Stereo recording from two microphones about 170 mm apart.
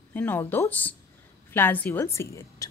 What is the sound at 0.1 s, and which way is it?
A woman's voice, 10° left (ahead or behind).